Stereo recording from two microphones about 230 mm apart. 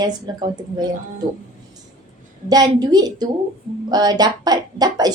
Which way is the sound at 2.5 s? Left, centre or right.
Centre.